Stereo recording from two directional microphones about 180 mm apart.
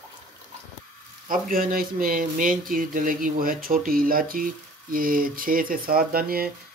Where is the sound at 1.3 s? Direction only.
50° right (ahead or behind).